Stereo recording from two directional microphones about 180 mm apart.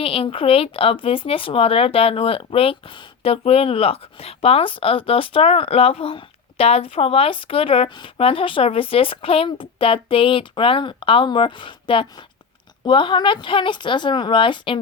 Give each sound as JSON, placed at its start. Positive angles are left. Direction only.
{"t": 0.0, "sound": "a woman's voice", "side_deg": 30}